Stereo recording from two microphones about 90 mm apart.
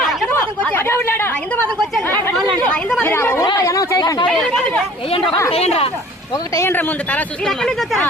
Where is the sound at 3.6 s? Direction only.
35° left (ahead or behind).